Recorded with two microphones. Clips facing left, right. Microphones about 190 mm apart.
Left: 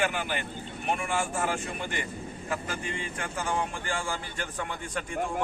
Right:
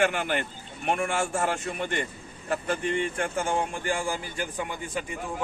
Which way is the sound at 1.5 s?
60° right (ahead or behind).